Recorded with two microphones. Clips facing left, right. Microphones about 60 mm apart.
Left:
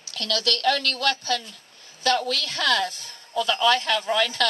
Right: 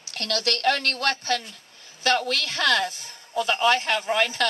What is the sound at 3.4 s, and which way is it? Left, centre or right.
Speech, right.